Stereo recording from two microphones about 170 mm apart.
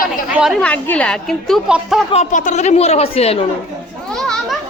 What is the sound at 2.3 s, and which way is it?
A woman's voice, 45° left (ahead or behind).